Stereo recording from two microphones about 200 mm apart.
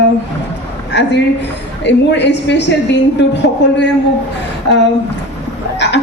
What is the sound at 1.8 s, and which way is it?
A woman's voice, 60° left (ahead or behind).